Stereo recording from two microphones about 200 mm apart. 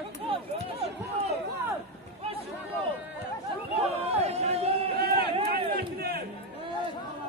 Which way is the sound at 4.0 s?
30° right (ahead or behind).